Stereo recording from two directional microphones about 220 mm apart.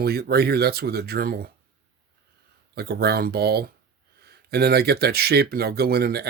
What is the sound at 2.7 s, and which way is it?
Speech, 45° right (ahead or behind).